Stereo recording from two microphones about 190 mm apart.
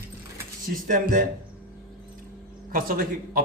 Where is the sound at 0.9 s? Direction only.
45° right (ahead or behind).